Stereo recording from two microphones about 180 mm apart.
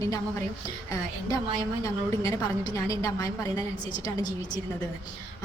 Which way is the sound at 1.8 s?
20° left (ahead or behind).